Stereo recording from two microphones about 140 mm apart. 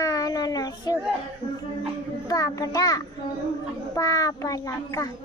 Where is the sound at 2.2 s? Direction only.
25° left (ahead or behind).